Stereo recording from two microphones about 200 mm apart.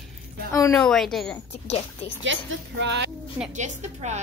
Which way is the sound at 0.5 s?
15° left (ahead or behind).